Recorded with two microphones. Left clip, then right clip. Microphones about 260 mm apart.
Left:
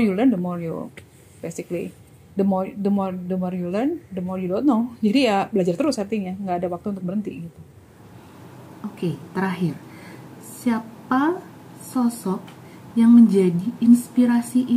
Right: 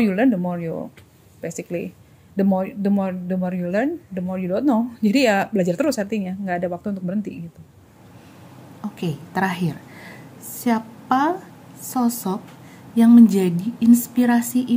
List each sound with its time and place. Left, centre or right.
0.0 s speech: right
9.0 s a woman's voice: right